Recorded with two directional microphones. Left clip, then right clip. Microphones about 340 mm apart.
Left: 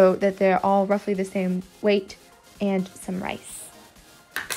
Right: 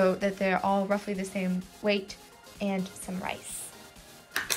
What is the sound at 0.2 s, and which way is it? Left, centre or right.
Speech, left.